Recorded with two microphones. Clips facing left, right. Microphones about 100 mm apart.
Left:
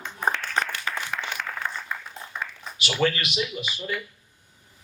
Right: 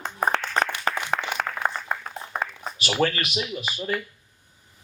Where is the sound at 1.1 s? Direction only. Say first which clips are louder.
Right 5 dB; 55° right (ahead or behind).